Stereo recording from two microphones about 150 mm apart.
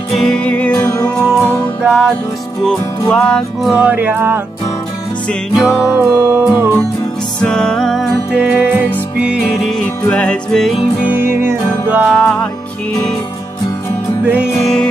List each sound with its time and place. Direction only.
0.1 s music: 5° left (ahead or behind)
1.8 s music: 5° right (ahead or behind)
2.6 s music: 5° left (ahead or behind)
3.7 s music: 10° right (ahead or behind)
5.5 s music: centre (ahead or behind)
5.9 s music: 15° right (ahead or behind)
7.4 s music: 5° left (ahead or behind)
8.4 s music: 10° right (ahead or behind)
11.1 s music: 15° right (ahead or behind)
12.1 s music: 5° left (ahead or behind)
14.6 s music: 5° left (ahead or behind)